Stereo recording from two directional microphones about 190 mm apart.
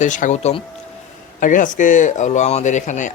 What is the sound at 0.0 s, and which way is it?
Speech, 40° left (ahead or behind).